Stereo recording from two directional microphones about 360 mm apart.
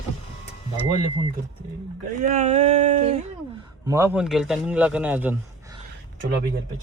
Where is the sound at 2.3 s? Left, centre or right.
Centre.